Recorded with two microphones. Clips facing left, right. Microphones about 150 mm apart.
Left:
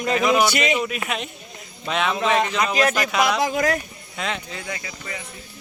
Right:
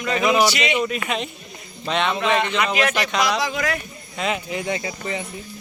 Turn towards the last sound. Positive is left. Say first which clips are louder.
# right 7 dB
turn(degrees=-25)  # may be behind; listen again after turning